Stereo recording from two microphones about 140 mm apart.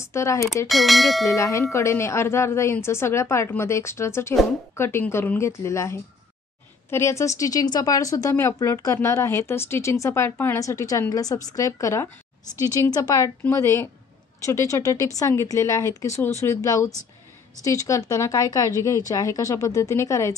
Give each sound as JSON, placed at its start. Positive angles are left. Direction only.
{"t": 0.0, "sound": "speech", "side_deg": 20}
{"t": 0.7, "sound": "speech", "side_deg": 0}
{"t": 1.3, "sound": "a woman's voice", "side_deg": 20}